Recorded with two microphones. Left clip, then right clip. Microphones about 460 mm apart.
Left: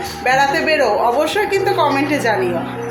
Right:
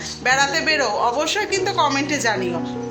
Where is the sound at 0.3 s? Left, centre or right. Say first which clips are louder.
Left 4 dB; right.